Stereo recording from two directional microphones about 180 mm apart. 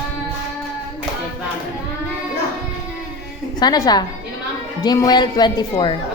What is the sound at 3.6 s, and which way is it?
A woman's voice, 20° left (ahead or behind).